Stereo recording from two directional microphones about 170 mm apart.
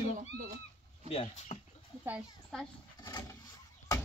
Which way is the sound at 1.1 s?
40° left (ahead or behind).